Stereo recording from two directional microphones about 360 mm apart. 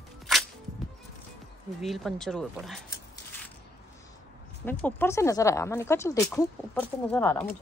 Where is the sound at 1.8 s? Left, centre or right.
Centre.